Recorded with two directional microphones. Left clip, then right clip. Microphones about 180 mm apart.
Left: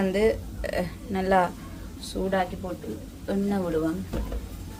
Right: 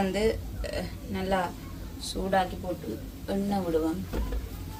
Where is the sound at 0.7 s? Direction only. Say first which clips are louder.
Left 6 dB; 50° left (ahead or behind).